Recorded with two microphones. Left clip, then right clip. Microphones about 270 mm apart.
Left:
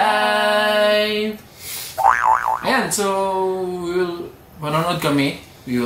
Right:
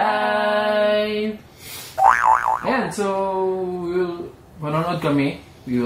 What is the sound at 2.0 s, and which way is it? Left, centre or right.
Boing, centre.